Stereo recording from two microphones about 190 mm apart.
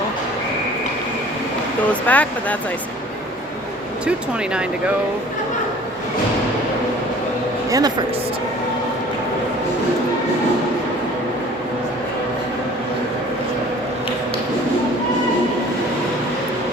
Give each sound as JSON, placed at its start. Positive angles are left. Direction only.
{"t": 1.9, "sound": "speech", "side_deg": 10}
{"t": 7.7, "sound": "speech", "side_deg": -20}